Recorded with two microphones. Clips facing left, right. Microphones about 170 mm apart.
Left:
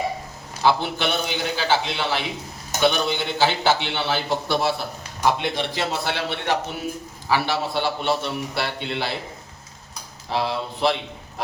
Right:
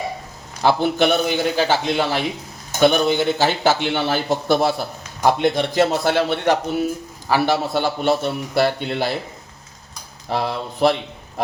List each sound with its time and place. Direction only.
0.6 s a man's voice: 50° right (ahead or behind)
10.2 s a man's voice: 50° right (ahead or behind)